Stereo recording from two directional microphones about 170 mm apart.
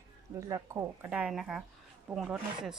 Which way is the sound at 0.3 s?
20° right (ahead or behind).